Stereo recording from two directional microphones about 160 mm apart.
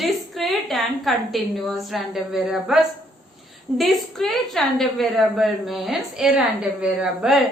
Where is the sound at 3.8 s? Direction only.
Centre (ahead or behind).